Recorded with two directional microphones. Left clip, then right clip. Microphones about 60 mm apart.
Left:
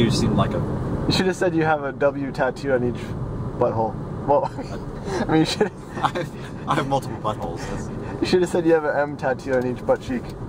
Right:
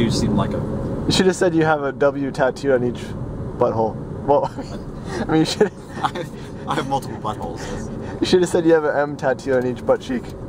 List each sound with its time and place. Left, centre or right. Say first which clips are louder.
0.0 s speech: even; centre
1.0 s speech: right 4 dB; right
5.3 s speech: right 3 dB; centre